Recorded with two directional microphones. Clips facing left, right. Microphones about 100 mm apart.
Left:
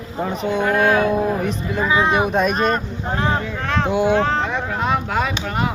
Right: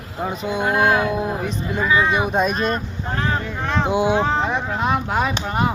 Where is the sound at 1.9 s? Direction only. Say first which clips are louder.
Even; 25° left (ahead or behind).